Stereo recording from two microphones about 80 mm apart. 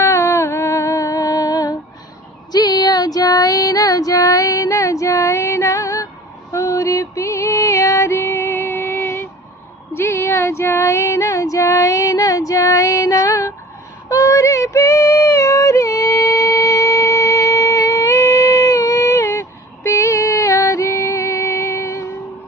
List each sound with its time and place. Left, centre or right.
0.0 s music: left
2.5 s female singing: left
6.5 s music: left
9.9 s female singing: left